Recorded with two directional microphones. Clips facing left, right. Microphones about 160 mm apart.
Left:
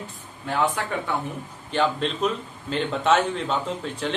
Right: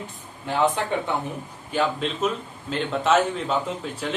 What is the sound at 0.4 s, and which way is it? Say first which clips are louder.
Speech: right 2 dB; 20° right (ahead or behind).